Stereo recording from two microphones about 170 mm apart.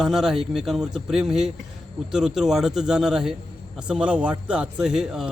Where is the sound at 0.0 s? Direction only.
5° right (ahead or behind).